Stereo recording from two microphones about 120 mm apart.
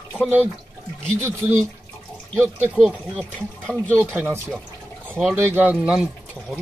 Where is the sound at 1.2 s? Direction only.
20° right (ahead or behind).